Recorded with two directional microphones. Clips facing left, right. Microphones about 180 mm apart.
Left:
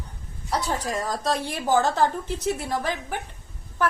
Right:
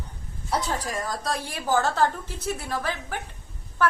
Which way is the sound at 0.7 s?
25° left (ahead or behind).